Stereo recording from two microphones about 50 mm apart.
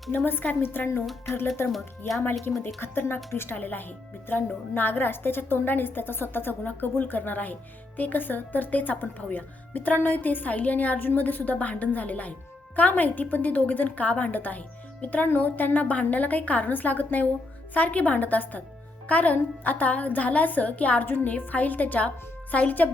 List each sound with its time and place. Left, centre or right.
0.3 s a woman's voice: left
2.5 s speech: left
2.8 s a woman's voice: left